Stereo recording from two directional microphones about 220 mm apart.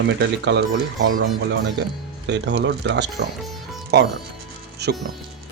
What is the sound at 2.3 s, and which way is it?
Speech, 55° right (ahead or behind).